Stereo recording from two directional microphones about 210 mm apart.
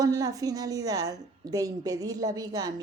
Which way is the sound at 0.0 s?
15° right (ahead or behind).